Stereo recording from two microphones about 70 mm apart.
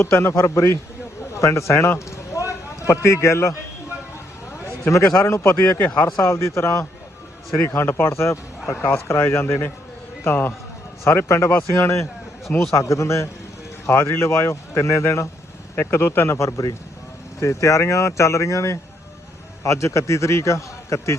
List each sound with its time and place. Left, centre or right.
0.0 s speech: left
1.3 s a sound: left
4.6 s a man's voice: left
15.7 s a man's voice: left